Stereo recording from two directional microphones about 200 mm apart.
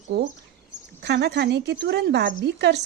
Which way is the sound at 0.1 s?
55° right (ahead or behind).